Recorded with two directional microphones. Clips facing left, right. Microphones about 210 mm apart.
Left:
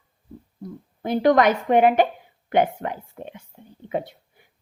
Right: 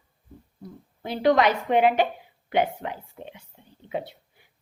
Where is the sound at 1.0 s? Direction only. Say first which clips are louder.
Left 3 dB; 50° left (ahead or behind).